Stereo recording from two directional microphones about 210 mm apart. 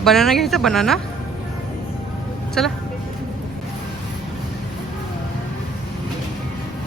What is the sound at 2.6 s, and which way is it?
Speech, 5° left (ahead or behind).